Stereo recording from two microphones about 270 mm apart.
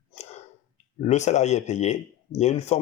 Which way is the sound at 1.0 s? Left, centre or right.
Left.